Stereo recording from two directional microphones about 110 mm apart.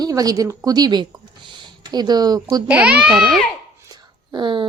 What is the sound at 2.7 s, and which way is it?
Speech, 10° right (ahead or behind).